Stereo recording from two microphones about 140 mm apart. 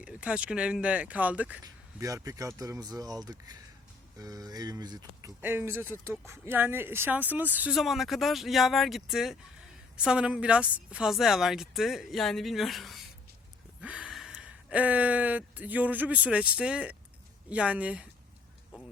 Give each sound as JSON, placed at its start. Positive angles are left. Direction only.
{"t": 0.0, "sound": "speech", "side_deg": -10}
{"t": 1.6, "sound": "speech", "side_deg": -25}
{"t": 5.4, "sound": "speech", "side_deg": -15}
{"t": 7.8, "sound": "speech", "side_deg": 0}